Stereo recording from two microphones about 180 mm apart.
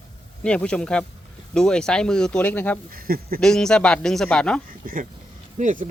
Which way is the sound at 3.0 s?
55° right (ahead or behind).